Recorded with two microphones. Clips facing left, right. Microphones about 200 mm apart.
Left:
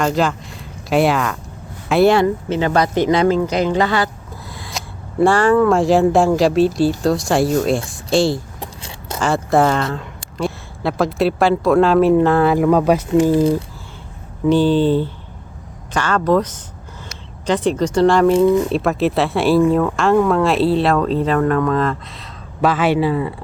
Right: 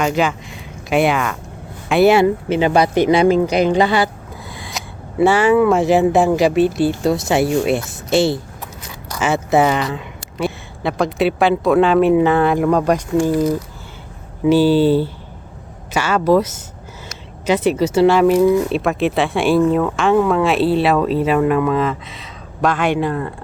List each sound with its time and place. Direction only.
0.0 s speech: 5° right (ahead or behind)
4.4 s speech: centre (ahead or behind)
8.6 s a sound: 30° left (ahead or behind)
9.2 s speech: 5° right (ahead or behind)
13.1 s speech: 25° left (ahead or behind)
14.4 s speech: 5° right (ahead or behind)